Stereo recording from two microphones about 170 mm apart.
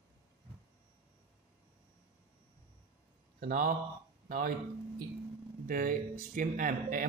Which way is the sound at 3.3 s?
55° right (ahead or behind).